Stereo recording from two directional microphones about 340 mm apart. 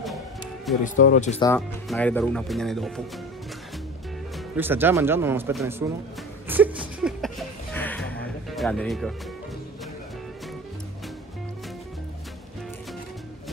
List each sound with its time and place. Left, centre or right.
0.8 s speech: left
1.5 s speech: centre
4.6 s speech: centre
6.4 s a sound: centre